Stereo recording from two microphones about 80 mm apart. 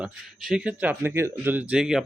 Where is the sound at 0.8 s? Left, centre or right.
Right.